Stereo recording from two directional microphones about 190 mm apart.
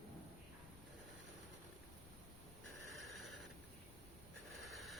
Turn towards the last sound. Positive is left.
turn(degrees=0)  # may be behind; listen again after turning